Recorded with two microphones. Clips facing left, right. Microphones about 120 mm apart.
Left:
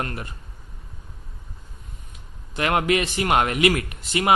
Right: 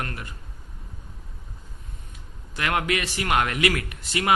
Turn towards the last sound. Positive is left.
turn(degrees=20)  # may be behind; listen again after turning